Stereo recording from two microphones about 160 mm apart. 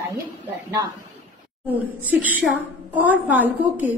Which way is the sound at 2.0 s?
10° right (ahead or behind).